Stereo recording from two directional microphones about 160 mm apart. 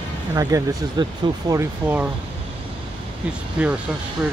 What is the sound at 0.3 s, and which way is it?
Speech, 20° right (ahead or behind).